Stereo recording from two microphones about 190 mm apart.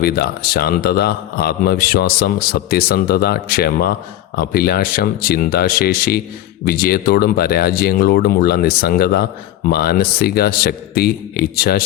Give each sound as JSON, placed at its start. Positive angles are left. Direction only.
{"t": 0.0, "sound": "a man's voice", "side_deg": 55}